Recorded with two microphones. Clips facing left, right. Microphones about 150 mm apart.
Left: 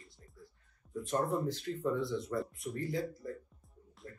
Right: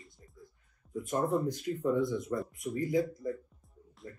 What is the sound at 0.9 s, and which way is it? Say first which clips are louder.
Speech: right 3 dB; centre (ahead or behind).